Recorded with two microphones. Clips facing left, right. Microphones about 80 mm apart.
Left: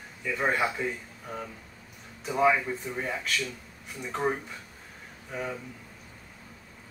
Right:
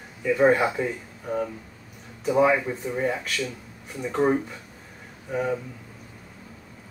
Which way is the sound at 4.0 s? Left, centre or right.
Centre.